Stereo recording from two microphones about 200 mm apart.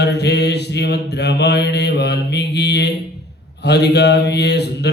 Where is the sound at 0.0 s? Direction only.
55° left (ahead or behind).